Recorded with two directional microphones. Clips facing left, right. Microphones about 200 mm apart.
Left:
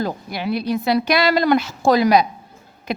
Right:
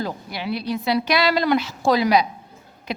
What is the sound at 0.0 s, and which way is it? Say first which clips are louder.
Speech: left 4 dB; 50° left (ahead or behind).